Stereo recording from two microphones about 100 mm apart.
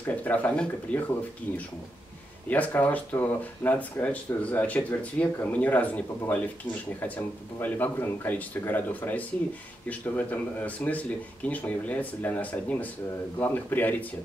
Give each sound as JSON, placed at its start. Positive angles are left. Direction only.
{"t": 0.0, "sound": "speech", "side_deg": 15}
{"t": 2.5, "sound": "speech", "side_deg": 15}
{"t": 7.6, "sound": "speech", "side_deg": 20}